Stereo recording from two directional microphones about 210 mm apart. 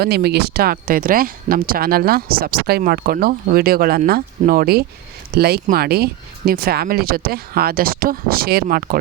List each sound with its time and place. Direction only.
0.0 s speech: 50° right (ahead or behind)